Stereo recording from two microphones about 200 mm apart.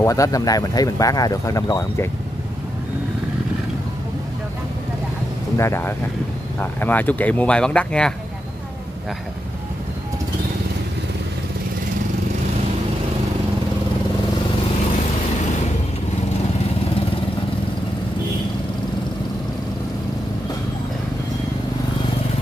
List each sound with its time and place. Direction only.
0.0 s speech: 15° left (ahead or behind)
5.6 s speech: 10° left (ahead or behind)